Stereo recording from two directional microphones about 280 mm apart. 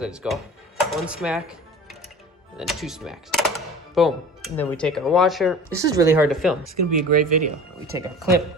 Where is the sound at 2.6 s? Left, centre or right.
Centre.